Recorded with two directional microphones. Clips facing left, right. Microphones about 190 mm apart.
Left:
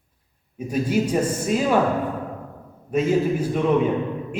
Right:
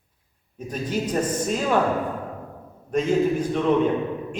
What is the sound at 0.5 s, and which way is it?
A man's voice, 10° left (ahead or behind).